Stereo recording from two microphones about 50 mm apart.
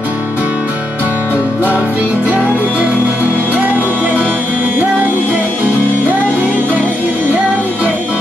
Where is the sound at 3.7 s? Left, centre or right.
Left.